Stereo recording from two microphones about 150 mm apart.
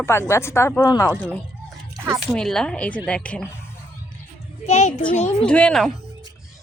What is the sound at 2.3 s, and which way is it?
Speech, 5° left (ahead or behind).